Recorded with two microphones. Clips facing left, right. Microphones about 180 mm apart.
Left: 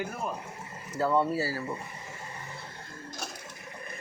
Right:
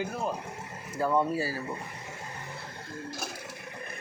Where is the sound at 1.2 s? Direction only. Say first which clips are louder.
Even; 15° right (ahead or behind).